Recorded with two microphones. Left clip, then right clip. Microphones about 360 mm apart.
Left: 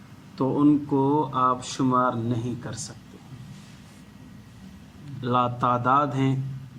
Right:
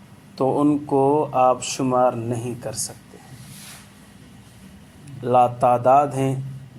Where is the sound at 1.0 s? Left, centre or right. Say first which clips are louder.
Right 5 dB; right.